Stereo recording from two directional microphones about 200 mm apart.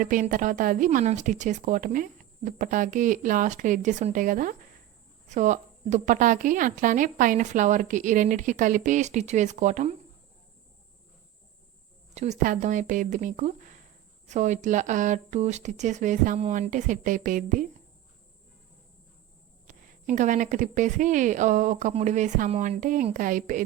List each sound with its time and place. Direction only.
0.0 s a woman's voice: 40° right (ahead or behind)
12.1 s a woman's voice: 35° right (ahead or behind)
19.6 s a woman's voice: 40° right (ahead or behind)